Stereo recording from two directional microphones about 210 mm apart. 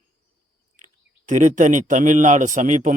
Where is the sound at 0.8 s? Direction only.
35° right (ahead or behind).